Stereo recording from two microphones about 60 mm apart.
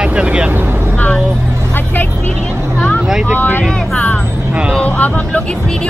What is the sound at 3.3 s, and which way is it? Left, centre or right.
Speech, left.